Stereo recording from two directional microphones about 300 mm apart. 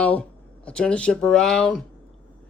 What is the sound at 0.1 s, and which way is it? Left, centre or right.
Speech, centre.